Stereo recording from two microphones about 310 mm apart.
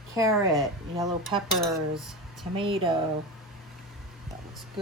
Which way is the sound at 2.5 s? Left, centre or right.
Centre.